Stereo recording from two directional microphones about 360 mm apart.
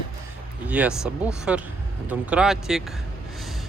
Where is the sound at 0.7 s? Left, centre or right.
Centre.